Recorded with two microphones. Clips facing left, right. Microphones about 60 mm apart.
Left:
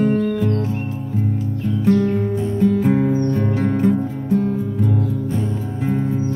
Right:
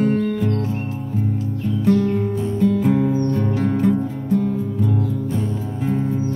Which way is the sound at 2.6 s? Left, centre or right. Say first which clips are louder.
Left 1 dB; left.